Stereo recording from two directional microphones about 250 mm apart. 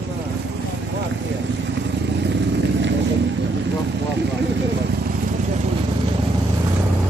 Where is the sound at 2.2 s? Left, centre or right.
Right.